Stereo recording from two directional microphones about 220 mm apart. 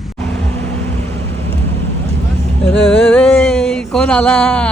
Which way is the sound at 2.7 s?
5° left (ahead or behind).